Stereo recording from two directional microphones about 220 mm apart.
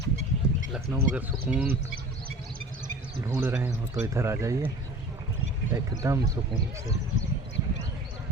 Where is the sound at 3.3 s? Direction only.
10° right (ahead or behind).